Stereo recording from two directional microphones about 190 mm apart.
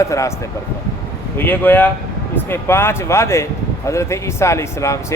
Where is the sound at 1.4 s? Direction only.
10° left (ahead or behind).